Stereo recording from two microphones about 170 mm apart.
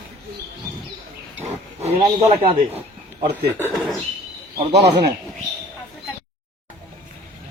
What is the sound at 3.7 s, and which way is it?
Speech, centre (ahead or behind).